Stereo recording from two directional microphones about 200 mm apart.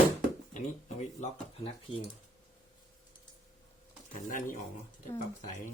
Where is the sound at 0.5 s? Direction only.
35° left (ahead or behind).